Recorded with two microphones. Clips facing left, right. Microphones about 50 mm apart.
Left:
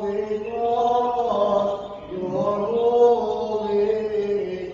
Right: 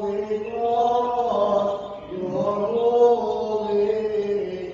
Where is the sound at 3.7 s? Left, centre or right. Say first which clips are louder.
Left 1 dB; left.